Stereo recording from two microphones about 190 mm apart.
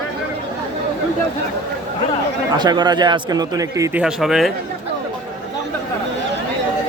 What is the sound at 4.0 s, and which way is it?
Speech, centre (ahead or behind).